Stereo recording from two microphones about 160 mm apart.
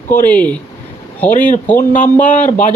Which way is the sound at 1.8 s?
50° left (ahead or behind).